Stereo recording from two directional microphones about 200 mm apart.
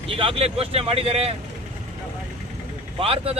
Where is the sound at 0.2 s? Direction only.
30° right (ahead or behind).